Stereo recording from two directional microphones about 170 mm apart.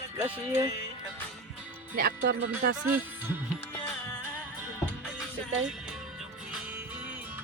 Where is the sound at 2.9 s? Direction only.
10° right (ahead or behind).